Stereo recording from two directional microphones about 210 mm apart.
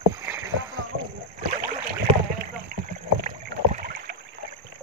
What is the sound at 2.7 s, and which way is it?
Rowboat, 45° right (ahead or behind).